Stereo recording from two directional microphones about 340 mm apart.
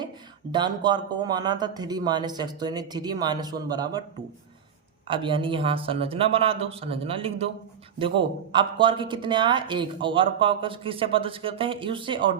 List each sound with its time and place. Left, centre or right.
0.5 s speech: centre
5.0 s speech: centre
8.5 s speech: centre